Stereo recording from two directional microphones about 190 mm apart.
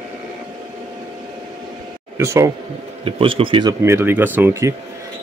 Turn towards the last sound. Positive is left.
turn(degrees=-15)  # may be behind; listen again after turning